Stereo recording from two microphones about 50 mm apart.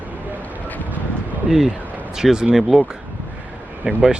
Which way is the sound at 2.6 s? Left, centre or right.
Centre.